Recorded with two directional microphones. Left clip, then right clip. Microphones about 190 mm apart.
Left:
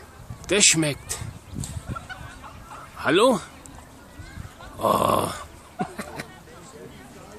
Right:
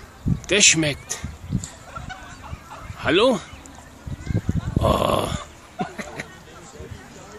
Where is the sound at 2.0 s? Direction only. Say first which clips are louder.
Right 2 dB; 40° right (ahead or behind).